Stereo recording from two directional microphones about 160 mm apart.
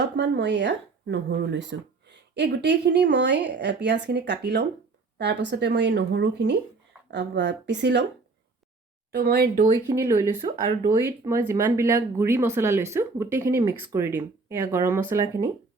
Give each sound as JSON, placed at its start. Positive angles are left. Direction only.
{"t": 0.2, "sound": "speech", "side_deg": -90}
{"t": 9.1, "sound": "speech", "side_deg": -75}
{"t": 9.7, "sound": "speech", "side_deg": -15}